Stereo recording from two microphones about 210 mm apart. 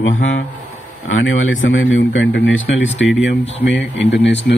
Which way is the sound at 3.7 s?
60° left (ahead or behind).